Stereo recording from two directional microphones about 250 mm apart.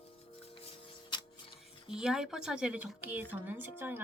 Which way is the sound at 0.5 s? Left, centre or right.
Left.